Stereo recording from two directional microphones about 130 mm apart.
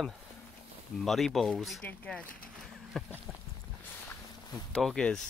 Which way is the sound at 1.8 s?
10° left (ahead or behind).